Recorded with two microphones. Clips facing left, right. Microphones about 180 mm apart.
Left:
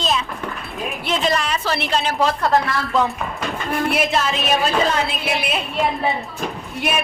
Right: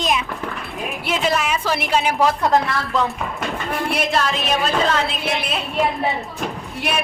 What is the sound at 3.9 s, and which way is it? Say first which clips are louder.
A woman's voice: even; 5° left (ahead or behind).